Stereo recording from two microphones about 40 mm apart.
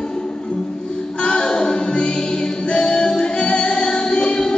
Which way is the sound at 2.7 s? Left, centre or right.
Left.